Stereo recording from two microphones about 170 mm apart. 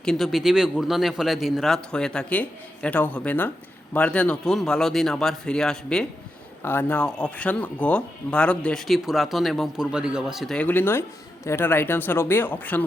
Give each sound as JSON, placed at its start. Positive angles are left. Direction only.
{"t": 0.0, "sound": "speech", "side_deg": 0}